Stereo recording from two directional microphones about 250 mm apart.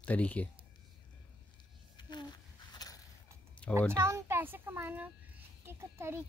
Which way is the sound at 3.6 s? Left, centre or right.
Centre.